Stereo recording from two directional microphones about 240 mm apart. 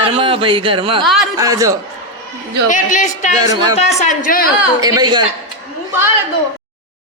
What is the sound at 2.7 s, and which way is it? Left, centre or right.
Speech, left.